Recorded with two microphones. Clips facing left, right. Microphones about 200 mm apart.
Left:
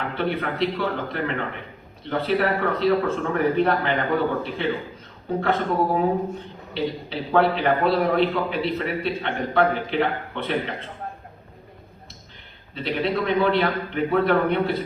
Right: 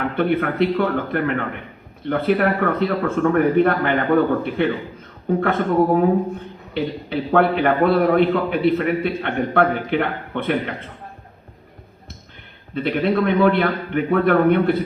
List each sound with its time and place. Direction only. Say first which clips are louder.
0.2 s a man's voice: right 6 dB; 55° right (ahead or behind)
12.7 s a man's voice: right 5 dB; 55° right (ahead or behind)